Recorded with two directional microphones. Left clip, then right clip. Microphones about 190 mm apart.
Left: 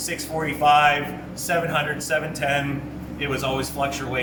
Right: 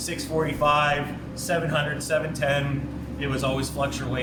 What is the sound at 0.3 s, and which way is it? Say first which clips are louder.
A man's voice: left 4 dB; 15° right (ahead or behind).